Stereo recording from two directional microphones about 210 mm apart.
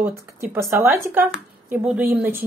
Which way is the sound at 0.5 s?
10° right (ahead or behind).